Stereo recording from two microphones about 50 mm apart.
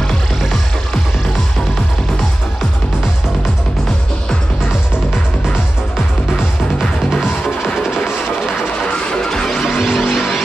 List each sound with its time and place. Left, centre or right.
6.8 s music: centre
7.8 s music: centre
9.1 s music: centre